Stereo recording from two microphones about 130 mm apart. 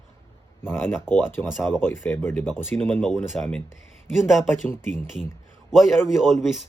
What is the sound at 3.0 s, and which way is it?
A man's voice, centre (ahead or behind).